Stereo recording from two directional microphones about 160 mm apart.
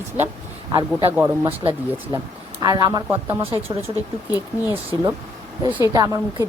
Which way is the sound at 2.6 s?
25° right (ahead or behind).